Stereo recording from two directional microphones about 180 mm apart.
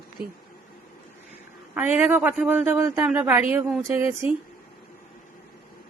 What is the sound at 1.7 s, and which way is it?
A man's voice, 10° right (ahead or behind).